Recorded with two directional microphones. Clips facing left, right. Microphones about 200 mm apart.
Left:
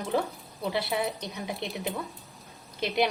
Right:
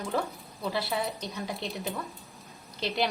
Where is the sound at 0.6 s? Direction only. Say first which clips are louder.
Left 2 dB; 20° left (ahead or behind).